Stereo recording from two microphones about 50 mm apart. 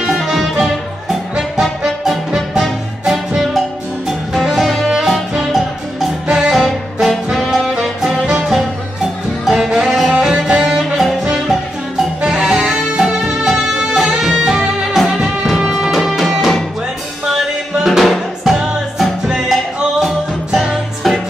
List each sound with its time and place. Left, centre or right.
0.0 s music: centre
6.2 s music: centre
6.5 s music: centre
7.4 s saxophone: centre
8.0 s music: centre
12.3 s music: centre